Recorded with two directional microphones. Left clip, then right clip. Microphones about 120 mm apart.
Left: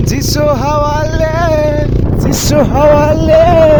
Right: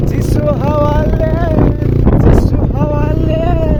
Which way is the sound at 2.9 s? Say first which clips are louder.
Left 10 dB; 90° left.